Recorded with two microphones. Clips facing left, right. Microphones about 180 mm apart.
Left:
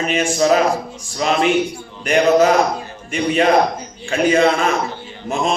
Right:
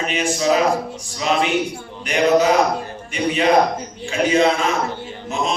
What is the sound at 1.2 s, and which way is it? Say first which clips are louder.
A man's voice: left 3 dB; 50° left (ahead or behind).